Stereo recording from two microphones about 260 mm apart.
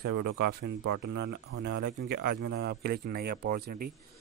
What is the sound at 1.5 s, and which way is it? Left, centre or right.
Speech, right.